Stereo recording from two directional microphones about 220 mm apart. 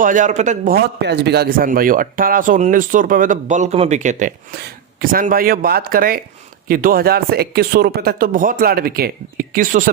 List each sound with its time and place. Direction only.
0.0 s a man's voice: 35° right (ahead or behind)